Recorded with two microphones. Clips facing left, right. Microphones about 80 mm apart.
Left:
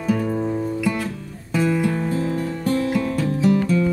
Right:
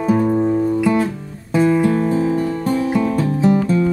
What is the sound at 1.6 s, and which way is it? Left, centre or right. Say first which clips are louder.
Music: right 6 dB; right.